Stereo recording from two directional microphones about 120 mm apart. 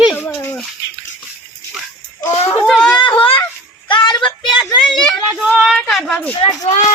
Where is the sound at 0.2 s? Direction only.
20° left (ahead or behind).